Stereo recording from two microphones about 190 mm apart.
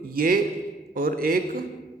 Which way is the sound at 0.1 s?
50° right (ahead or behind).